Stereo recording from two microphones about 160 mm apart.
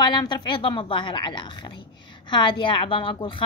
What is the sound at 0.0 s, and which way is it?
A woman's voice, 25° left (ahead or behind).